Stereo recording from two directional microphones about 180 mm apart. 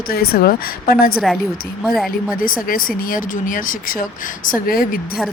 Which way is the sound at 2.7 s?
55° left (ahead or behind).